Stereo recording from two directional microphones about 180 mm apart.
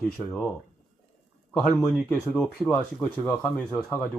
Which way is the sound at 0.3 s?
10° left (ahead or behind).